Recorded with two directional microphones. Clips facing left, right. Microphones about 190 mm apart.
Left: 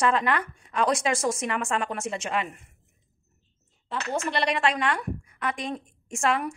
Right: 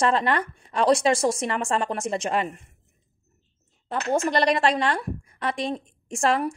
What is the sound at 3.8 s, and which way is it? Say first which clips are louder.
A woman's voice: right 5 dB; 45° right (ahead or behind).